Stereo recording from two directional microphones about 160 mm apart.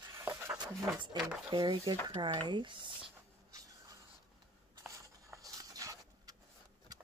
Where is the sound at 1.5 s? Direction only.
25° right (ahead or behind).